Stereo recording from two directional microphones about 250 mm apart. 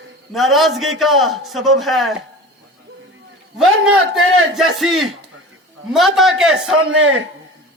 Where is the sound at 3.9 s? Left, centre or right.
Right.